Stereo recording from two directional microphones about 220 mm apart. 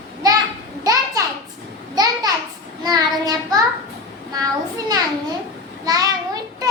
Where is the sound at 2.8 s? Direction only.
15° right (ahead or behind).